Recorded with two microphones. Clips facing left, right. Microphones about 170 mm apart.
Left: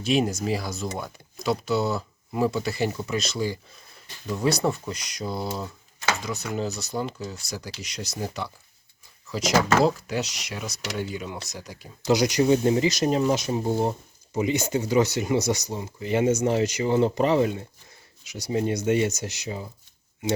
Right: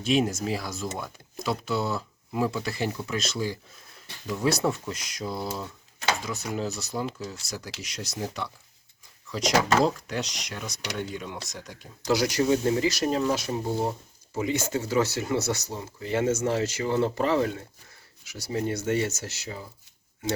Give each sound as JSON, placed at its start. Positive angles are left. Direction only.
{"t": 0.0, "sound": "speech", "side_deg": 0}
{"t": 12.0, "sound": "speech", "side_deg": 20}